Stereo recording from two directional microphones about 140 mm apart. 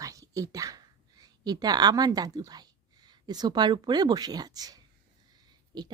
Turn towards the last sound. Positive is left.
turn(degrees=-30)  # may be behind; listen again after turning